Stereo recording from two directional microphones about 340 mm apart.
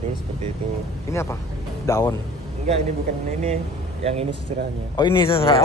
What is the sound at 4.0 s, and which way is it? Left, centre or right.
Speech, centre.